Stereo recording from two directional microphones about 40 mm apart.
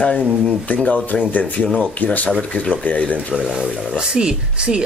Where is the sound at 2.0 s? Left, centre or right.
Left.